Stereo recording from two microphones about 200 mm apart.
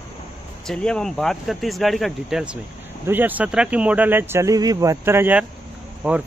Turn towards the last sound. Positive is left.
turn(degrees=-5)  # may be behind; listen again after turning